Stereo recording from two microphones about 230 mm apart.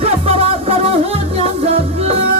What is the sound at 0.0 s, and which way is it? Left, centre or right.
Music, right.